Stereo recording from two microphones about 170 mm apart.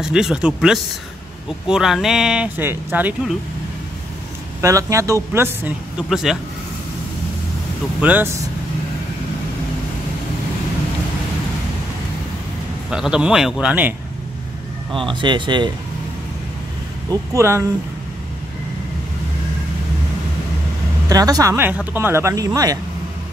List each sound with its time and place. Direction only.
0.0 s speech: 5° right (ahead or behind)
4.6 s speech: 20° right (ahead or behind)
6.0 s speech: centre (ahead or behind)
8.0 s speech: 10° right (ahead or behind)
12.9 s speech: 5° right (ahead or behind)
15.0 s speech: 30° right (ahead or behind)
17.1 s speech: 20° right (ahead or behind)
21.1 s speech: 20° right (ahead or behind)